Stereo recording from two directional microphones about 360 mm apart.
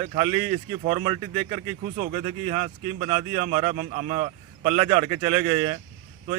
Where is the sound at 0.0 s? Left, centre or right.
Centre.